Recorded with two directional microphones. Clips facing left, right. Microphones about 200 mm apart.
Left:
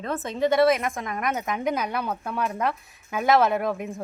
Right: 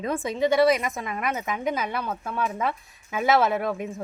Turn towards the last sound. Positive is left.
turn(degrees=0)  # may be behind; listen again after turning